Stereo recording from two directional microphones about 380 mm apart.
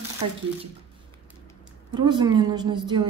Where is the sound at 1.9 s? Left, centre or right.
Centre.